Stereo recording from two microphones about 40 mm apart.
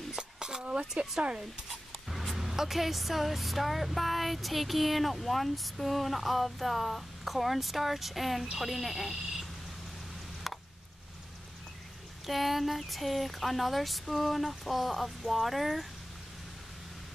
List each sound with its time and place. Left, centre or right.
0.1 s a sound: centre
2.0 s speech: centre
12.3 s speech: centre